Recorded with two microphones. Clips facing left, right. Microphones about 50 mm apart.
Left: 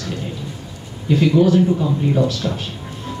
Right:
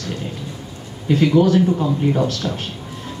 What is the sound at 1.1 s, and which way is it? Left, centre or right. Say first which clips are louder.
Speech: even; right.